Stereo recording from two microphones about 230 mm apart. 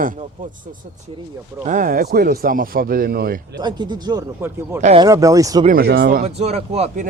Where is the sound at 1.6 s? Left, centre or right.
Right.